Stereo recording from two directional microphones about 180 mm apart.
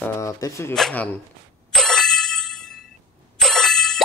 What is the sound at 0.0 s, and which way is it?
Speech, 15° left (ahead or behind).